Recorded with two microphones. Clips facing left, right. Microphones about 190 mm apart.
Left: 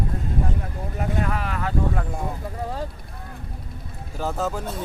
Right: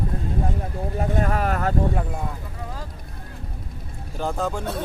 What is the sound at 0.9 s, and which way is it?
Speech, 40° right (ahead or behind).